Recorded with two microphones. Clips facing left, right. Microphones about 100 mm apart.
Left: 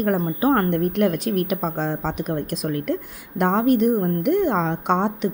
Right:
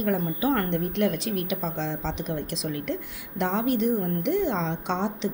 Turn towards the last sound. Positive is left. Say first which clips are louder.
# left 7 dB
turn(degrees=50)  # may be behind; listen again after turning